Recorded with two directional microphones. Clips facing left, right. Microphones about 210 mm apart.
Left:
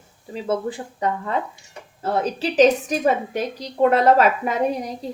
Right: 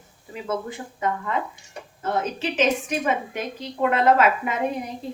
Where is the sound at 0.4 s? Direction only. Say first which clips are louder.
Left 4 dB; 35° left (ahead or behind).